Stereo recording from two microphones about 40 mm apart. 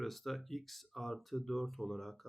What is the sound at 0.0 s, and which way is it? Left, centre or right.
Speech, centre.